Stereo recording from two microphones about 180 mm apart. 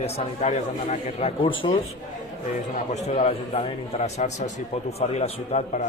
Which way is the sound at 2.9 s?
35° left (ahead or behind).